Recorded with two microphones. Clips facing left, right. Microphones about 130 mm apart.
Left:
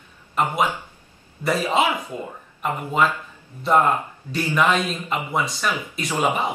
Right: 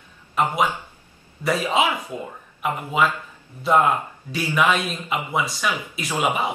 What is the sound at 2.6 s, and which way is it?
Speech, 5° right (ahead or behind).